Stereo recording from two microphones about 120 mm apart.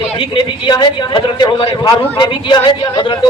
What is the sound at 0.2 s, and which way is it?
A man's voice, 40° left (ahead or behind).